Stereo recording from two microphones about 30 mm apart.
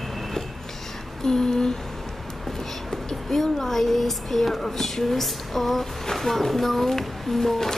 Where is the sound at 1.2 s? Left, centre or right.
Left.